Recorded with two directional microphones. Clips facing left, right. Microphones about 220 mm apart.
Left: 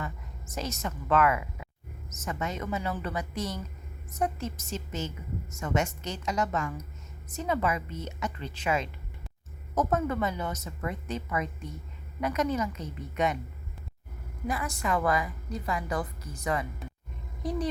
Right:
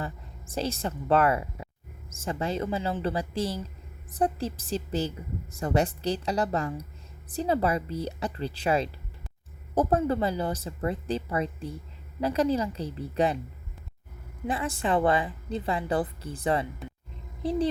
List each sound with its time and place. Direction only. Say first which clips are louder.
0.0 s a woman's voice: right 2 dB; 30° right (ahead or behind)
14.4 s a woman's voice: right 3 dB; 30° right (ahead or behind)